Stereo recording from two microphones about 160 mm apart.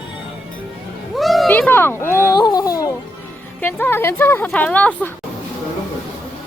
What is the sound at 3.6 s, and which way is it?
A woman's voice, 15° left (ahead or behind).